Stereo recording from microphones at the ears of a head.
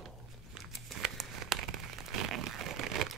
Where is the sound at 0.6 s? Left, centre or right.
Right.